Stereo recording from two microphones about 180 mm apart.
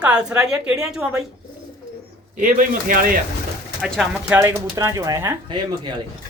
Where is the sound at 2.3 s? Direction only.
50° right (ahead or behind).